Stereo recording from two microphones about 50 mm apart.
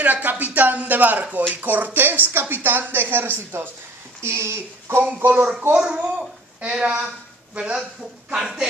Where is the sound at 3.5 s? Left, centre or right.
Right.